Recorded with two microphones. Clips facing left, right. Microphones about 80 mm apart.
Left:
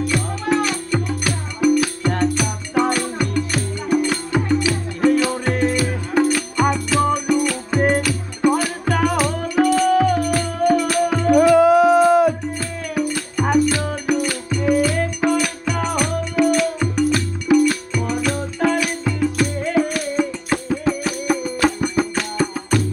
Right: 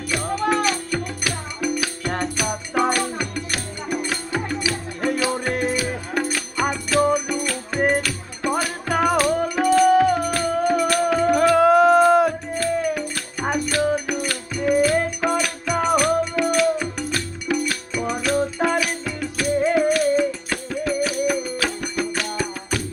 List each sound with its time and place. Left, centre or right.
0.1 s music: centre
20.5 s music: centre
21.0 s music: centre
22.0 s music: left